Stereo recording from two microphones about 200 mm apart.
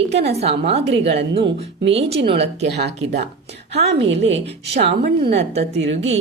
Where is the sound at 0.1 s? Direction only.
55° right (ahead or behind).